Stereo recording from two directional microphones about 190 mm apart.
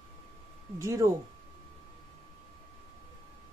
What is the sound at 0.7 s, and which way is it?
Speech, 15° right (ahead or behind).